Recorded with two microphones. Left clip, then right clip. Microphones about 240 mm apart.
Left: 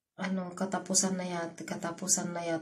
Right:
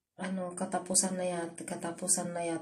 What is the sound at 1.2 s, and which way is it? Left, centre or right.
Speech, centre.